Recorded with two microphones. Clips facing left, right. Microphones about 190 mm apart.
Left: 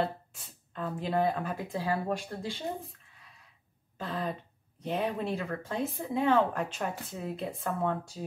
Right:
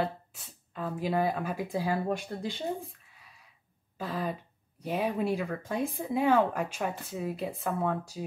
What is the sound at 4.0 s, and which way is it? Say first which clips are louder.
A woman's voice: right 1 dB; 5° right (ahead or behind).